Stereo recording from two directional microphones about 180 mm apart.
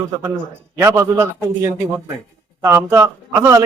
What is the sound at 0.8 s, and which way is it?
A man's voice, 15° right (ahead or behind).